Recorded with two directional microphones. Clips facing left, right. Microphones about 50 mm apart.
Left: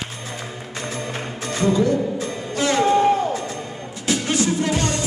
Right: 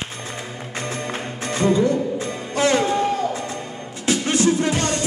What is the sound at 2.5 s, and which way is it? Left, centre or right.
Music, right.